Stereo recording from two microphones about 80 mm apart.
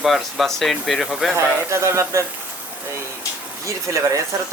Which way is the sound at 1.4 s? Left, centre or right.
Right.